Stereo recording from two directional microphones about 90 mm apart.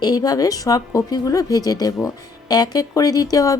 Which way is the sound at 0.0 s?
45° left (ahead or behind).